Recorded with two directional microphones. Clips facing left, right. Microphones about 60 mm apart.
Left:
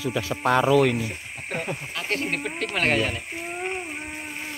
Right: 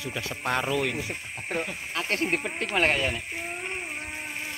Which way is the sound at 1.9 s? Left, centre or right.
Right.